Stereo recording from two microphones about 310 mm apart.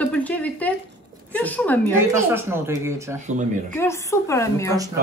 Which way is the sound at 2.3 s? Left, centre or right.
Centre.